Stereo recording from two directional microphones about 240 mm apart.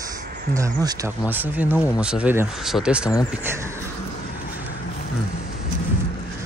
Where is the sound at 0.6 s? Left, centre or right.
Centre.